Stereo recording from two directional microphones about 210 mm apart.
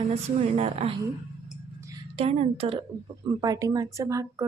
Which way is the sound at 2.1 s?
30° right (ahead or behind).